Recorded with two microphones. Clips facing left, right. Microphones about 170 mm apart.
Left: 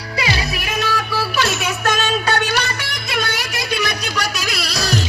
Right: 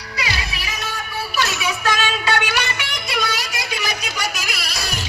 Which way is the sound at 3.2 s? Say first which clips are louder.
Left 2 dB; 60° left (ahead or behind).